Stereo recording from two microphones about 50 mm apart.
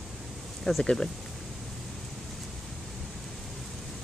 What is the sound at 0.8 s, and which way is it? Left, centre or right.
Speech, centre.